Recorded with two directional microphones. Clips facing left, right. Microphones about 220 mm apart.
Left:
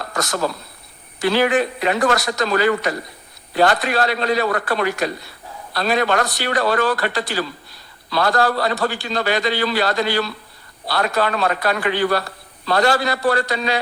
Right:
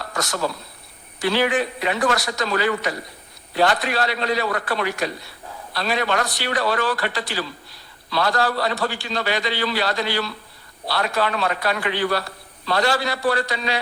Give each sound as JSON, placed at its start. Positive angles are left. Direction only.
{"t": 0.2, "sound": "a man's voice", "side_deg": 45}